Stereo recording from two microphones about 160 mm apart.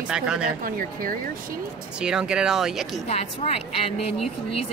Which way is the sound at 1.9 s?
5° right (ahead or behind).